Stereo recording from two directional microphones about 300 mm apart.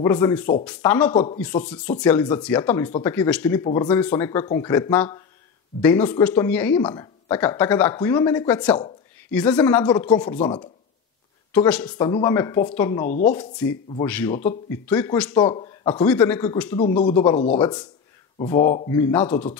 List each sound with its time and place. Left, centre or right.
0.0 s speech: centre
1.1 s speech: centre
2.0 s speech: centre
11.5 s speech: centre
16.7 s speech: centre